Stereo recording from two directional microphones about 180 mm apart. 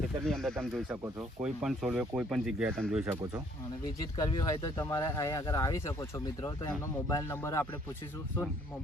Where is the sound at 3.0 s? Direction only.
15° right (ahead or behind).